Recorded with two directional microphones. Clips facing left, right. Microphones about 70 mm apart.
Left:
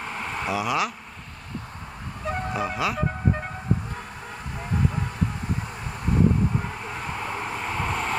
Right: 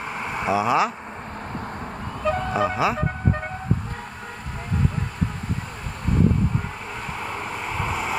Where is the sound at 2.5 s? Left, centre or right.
Right.